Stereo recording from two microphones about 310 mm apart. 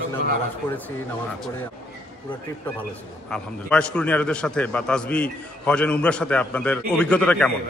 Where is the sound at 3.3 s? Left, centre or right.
Centre.